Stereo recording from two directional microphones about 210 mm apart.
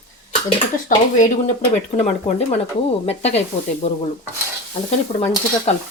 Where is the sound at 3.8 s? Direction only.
30° left (ahead or behind).